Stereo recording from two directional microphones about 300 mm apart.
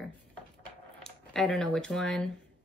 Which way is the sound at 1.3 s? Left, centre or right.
Centre.